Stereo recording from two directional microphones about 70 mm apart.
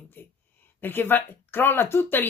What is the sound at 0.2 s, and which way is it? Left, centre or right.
Speech, left.